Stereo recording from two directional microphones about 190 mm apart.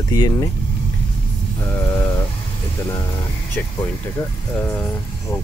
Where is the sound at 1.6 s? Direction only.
15° left (ahead or behind).